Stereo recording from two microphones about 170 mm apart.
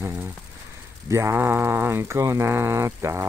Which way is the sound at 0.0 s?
10° right (ahead or behind).